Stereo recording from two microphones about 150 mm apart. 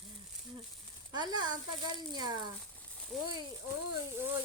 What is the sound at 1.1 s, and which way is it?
Speech, 25° right (ahead or behind).